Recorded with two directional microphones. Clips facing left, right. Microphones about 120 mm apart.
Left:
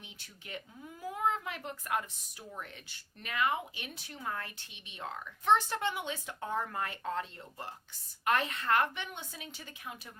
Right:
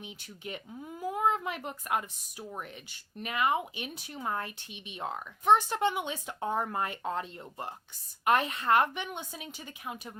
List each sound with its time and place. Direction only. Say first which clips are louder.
0.0 s speech: right 10 dB; 20° right (ahead or behind)
3.2 s speech: right 3 dB; 20° right (ahead or behind)